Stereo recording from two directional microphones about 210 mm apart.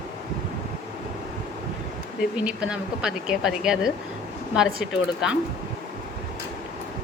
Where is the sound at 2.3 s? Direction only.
5° right (ahead or behind).